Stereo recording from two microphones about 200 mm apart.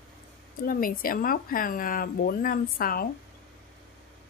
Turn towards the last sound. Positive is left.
turn(degrees=45)  # may be behind; listen again after turning